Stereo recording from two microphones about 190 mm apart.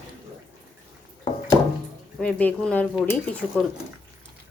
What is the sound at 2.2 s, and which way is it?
Speech, 5° left (ahead or behind).